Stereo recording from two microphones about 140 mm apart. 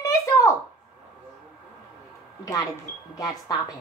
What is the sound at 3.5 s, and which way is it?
Speech, 30° left (ahead or behind).